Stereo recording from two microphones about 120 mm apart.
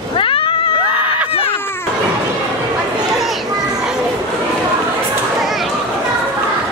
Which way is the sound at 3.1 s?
Centre (ahead or behind).